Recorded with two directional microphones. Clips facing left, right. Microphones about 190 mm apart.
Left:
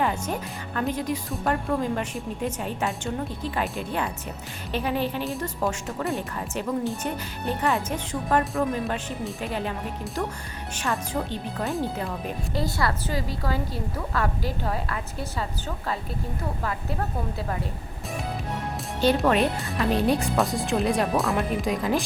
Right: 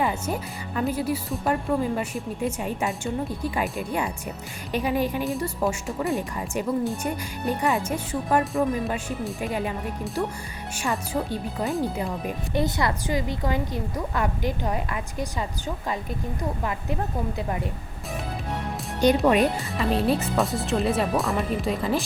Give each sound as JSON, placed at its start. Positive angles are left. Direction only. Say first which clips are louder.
{"t": 0.0, "sound": "speech", "louder": "even", "side_deg": -10}
{"t": 18.9, "sound": "speech", "louder": "right 2 dB", "side_deg": -15}
{"t": 19.5, "sound": "speech", "louder": "even", "side_deg": 0}